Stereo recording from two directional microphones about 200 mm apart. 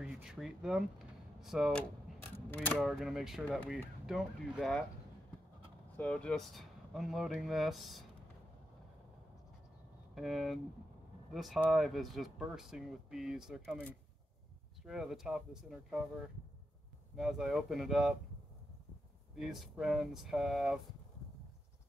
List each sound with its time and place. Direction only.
0.0 s speech: 5° right (ahead or behind)
2.3 s mechanisms: 10° left (ahead or behind)
2.8 s speech: centre (ahead or behind)
5.9 s speech: 5° left (ahead or behind)
10.1 s speech: centre (ahead or behind)
14.9 s speech: centre (ahead or behind)
19.3 s speech: centre (ahead or behind)